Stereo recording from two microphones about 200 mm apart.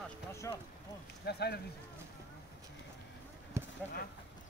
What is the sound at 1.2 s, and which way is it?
Speech, 55° left (ahead or behind).